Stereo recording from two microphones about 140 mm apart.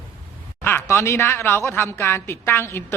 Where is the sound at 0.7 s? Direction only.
15° left (ahead or behind).